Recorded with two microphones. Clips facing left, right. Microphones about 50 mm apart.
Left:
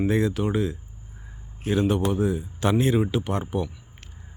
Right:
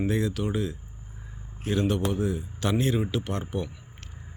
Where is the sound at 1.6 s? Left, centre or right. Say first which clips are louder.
Left 3 dB; centre.